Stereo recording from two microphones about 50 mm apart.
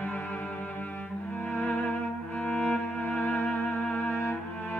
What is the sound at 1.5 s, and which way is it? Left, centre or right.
Music, left.